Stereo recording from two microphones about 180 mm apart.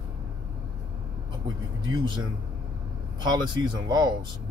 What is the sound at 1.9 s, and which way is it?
Speech, 25° right (ahead or behind).